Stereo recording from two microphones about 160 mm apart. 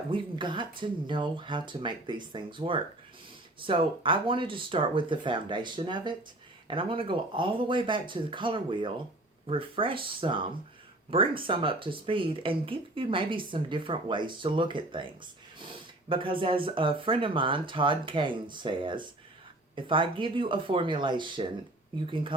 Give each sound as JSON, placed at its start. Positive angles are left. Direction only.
{"t": 0.1, "sound": "speech", "side_deg": -30}